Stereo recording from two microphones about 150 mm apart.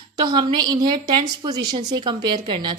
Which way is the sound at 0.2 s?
30° right (ahead or behind).